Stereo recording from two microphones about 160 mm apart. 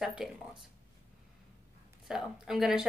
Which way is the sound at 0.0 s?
5° right (ahead or behind).